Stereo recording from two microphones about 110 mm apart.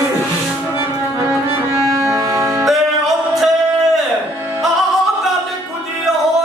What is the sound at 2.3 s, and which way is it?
Music, 30° right (ahead or behind).